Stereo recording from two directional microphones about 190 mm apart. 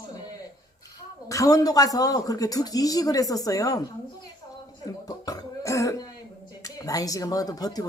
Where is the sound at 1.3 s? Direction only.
20° left (ahead or behind).